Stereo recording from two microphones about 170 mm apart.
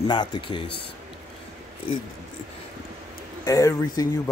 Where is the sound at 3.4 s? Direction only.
20° left (ahead or behind).